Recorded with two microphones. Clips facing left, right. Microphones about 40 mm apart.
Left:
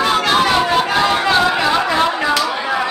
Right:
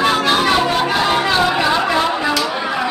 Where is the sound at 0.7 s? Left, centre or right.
Centre.